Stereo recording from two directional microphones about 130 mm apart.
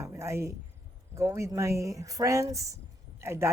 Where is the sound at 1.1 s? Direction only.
20° right (ahead or behind).